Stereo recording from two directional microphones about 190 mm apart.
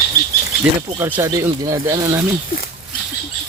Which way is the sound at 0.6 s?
10° right (ahead or behind).